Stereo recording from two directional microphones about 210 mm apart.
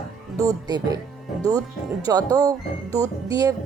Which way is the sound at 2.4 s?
15° right (ahead or behind).